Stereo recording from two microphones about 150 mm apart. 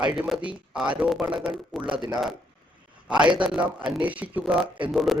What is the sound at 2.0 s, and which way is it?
Speech, 25° right (ahead or behind).